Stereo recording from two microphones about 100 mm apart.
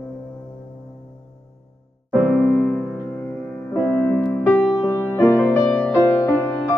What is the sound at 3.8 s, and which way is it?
Music, 20° left (ahead or behind).